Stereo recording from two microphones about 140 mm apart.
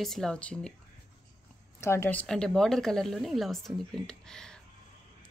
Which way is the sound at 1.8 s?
15° left (ahead or behind).